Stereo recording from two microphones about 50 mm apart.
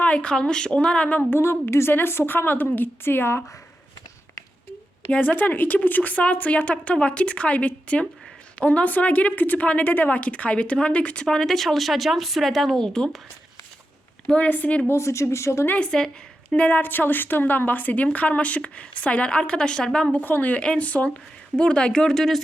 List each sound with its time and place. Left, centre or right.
0.0 s a woman's voice: left
1.3 s a woman's voice: left
5.1 s a woman's voice: left; by 13.2 s centre
14.3 s a woman's voice: left
14.9 s speech: left
15.8 s speech: centre
16.5 s a woman's voice: left
20.1 s a woman's voice: left
20.6 s a woman's voice: left; by 22.4 s centre